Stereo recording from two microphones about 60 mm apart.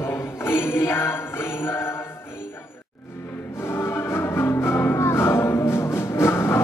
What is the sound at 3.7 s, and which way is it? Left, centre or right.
Music, left.